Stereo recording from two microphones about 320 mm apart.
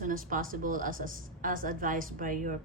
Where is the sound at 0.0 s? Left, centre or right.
Right.